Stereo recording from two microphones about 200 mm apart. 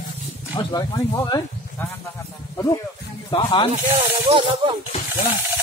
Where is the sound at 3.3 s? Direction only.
25° left (ahead or behind).